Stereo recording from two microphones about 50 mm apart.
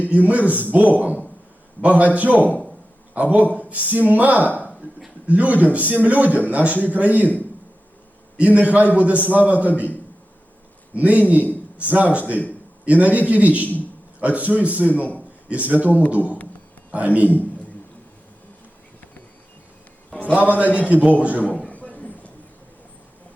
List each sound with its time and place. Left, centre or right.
0.1 s a man's voice: right
8.4 s a man's voice: right
10.9 s a man's voice: right
20.1 s a sound: left
20.7 s a man's voice: left
20.9 s a man's voice: right
21.7 s a sound: left